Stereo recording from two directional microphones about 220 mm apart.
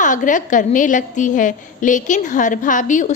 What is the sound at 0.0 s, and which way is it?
A woman's voice, 35° left (ahead or behind).